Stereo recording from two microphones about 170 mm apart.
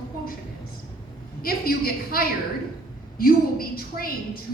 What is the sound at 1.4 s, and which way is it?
A woman's voice, 60° left (ahead or behind).